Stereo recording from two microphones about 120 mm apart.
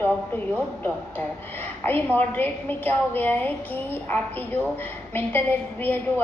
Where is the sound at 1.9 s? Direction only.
15° left (ahead or behind).